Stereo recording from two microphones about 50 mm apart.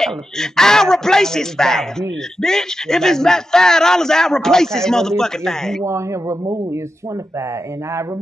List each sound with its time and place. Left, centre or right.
0.0 s speech: centre
5.9 s speech: right